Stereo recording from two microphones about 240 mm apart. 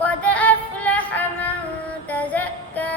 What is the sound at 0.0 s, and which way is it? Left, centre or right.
Yodeling, centre.